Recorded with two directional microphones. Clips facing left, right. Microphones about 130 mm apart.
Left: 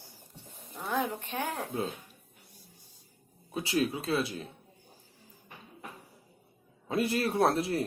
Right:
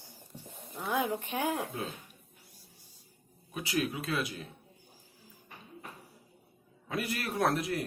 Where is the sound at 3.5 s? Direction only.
30° left (ahead or behind).